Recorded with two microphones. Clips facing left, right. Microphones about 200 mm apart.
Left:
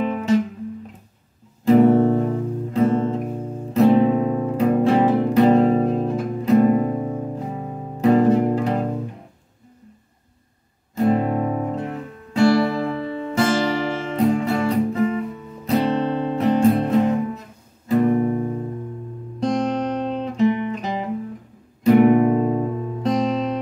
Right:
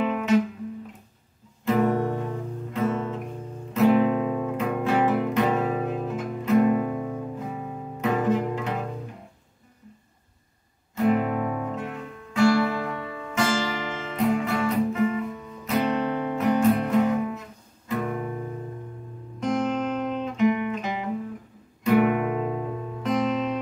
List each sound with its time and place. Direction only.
1.8 s music: 30° left (ahead or behind)
11.0 s music: 30° left (ahead or behind)